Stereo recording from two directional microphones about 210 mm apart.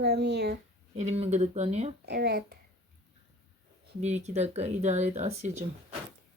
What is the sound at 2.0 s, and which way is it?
Speech, 50° right (ahead or behind).